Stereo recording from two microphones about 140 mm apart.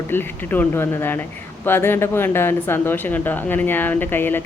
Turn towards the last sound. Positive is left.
turn(degrees=15)  # may be behind; listen again after turning